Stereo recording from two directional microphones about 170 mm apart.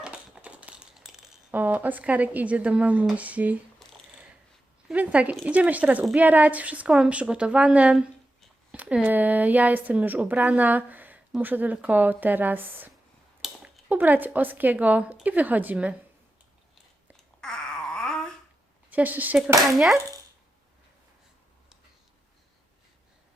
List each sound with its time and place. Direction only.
0.0 s crumpling: 5° right (ahead or behind)
4.9 s a woman's voice: 5° right (ahead or behind)
17.4 s a sound: 5° left (ahead or behind)
18.9 s a woman's voice: 10° right (ahead or behind)